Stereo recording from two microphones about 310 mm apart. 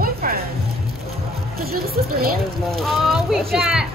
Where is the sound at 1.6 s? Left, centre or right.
Right.